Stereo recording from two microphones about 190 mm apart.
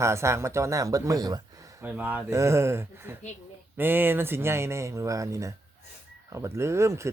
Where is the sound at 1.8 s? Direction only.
10° right (ahead or behind).